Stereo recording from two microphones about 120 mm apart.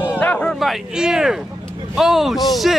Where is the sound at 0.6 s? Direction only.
5° right (ahead or behind).